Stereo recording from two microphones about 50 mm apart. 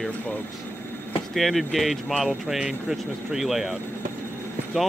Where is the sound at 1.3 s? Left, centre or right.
Centre.